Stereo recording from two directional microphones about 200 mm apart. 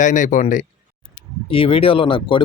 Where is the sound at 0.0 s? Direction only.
40° left (ahead or behind).